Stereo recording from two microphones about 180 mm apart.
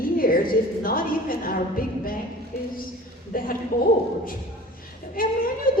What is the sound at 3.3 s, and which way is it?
Speech, 50° left (ahead or behind).